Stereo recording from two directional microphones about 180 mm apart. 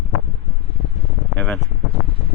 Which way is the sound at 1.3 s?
10° left (ahead or behind).